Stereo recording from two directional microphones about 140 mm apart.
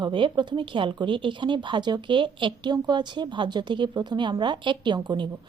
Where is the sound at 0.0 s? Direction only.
35° right (ahead or behind).